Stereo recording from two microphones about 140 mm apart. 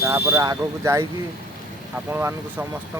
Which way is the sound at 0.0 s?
20° right (ahead or behind).